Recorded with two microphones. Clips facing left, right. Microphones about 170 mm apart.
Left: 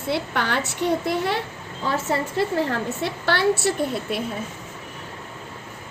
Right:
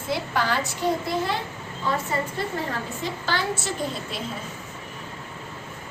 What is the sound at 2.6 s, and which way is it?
A woman's voice, 65° left (ahead or behind).